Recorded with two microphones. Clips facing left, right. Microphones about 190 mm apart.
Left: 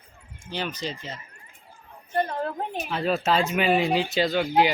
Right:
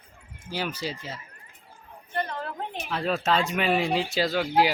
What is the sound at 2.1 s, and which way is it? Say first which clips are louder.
Speech: left 5 dB; 30° left (ahead or behind).